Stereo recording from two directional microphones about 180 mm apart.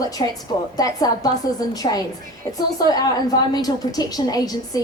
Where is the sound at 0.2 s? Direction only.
25° left (ahead or behind).